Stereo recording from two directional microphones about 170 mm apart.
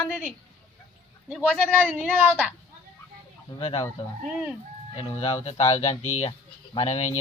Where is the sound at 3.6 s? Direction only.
35° left (ahead or behind).